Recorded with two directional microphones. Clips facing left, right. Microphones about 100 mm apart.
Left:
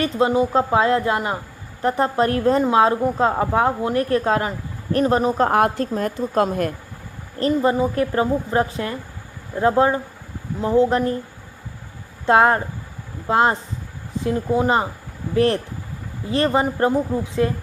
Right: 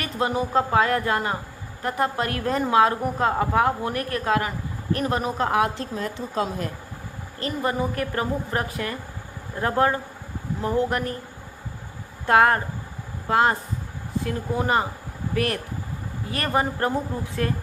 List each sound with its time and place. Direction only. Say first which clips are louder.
0.0 s a woman's voice: left 7 dB; 25° left (ahead or behind)
1.8 s a woman's voice: left 6 dB; 30° left (ahead or behind)
5.5 s a woman's voice: left 5 dB; 50° left (ahead or behind)
7.3 s a woman's voice: left 7 dB; 30° left (ahead or behind)
12.2 s a woman's voice: left 3 dB; 25° left (ahead or behind)